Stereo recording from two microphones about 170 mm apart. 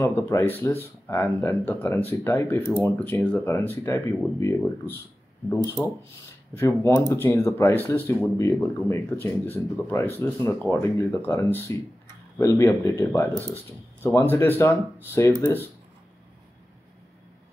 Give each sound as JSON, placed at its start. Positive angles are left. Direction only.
{"t": 0.0, "sound": "speech", "side_deg": 15}
{"t": 6.5, "sound": "speech", "side_deg": 15}